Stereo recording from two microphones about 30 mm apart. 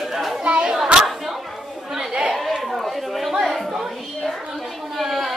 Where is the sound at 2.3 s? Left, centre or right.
Centre.